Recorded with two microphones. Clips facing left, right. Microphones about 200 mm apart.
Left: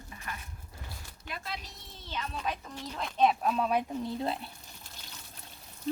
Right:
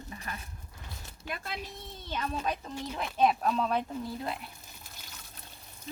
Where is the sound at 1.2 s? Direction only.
50° right (ahead or behind).